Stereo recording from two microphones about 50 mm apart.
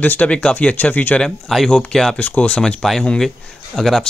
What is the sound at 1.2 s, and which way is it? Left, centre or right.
Speech, centre.